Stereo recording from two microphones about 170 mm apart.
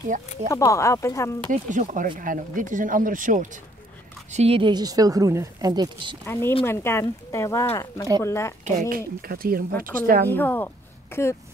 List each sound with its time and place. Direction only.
0.5 s speech: 15° left (ahead or behind)
1.5 s speech: 50° right (ahead or behind)
4.3 s a woman's voice: 35° right (ahead or behind)
6.2 s speech: 15° left (ahead or behind)
8.6 s speech: 50° right (ahead or behind)
10.3 s speech: 10° left (ahead or behind)